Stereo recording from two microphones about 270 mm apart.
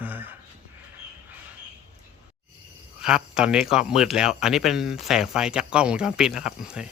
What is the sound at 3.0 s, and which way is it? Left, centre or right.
Speech, centre.